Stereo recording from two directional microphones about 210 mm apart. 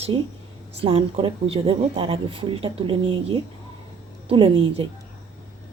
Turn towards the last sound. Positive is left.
turn(degrees=-25)  # may be behind; listen again after turning